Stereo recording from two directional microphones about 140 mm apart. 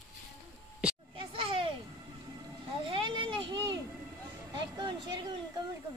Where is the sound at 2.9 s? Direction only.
35° right (ahead or behind).